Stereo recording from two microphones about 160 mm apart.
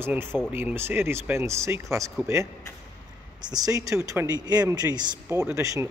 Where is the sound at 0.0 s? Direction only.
15° right (ahead or behind).